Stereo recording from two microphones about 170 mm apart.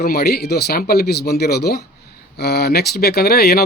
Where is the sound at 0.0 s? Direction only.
65° left (ahead or behind).